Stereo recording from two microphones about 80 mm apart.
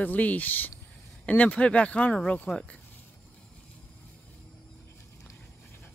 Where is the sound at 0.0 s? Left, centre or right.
Centre.